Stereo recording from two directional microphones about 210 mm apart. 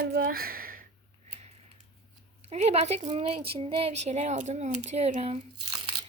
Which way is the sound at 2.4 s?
30° right (ahead or behind).